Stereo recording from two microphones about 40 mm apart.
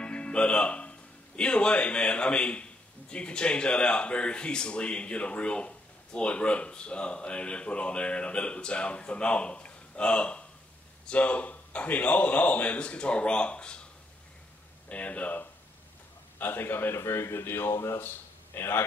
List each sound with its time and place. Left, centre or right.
0.0 s speech: left
14.9 s speech: left
16.3 s speech: left